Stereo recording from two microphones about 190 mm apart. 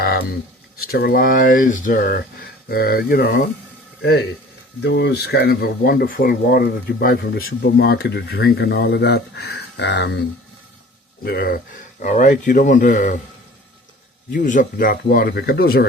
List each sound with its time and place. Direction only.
0.0 s a sound: 55° left (ahead or behind)
0.8 s speech: 55° left (ahead or behind)
4.8 s speech: 65° left (ahead or behind)
11.2 s speech: 55° left (ahead or behind)
12.0 s speech: 40° left (ahead or behind)
14.3 s speech: 45° left (ahead or behind)